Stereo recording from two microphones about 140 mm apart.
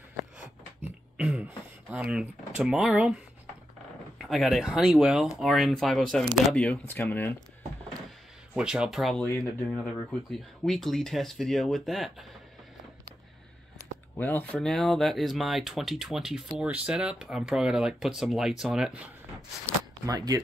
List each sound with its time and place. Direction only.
1.1 s speech: 10° right (ahead or behind)
4.2 s speech: centre (ahead or behind)
8.5 s speech: 5° right (ahead or behind)
14.1 s speech: 15° left (ahead or behind); by 19.0 s 5° right (ahead or behind)
20.1 s speech: 25° right (ahead or behind)